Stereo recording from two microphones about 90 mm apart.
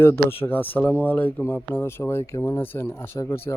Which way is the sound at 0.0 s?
25° left (ahead or behind).